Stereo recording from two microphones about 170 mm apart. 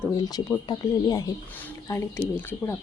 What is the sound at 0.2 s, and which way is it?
Speech, 20° left (ahead or behind).